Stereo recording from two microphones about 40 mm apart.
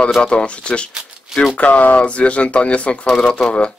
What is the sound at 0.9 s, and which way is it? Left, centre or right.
Shuffling cards, centre.